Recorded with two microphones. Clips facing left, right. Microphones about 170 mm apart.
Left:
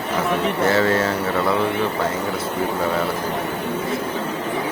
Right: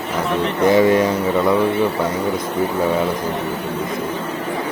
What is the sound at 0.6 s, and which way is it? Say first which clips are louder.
Speech: right 6 dB; 15° right (ahead or behind).